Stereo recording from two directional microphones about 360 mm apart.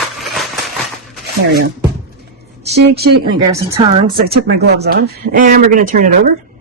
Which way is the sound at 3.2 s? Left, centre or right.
Centre.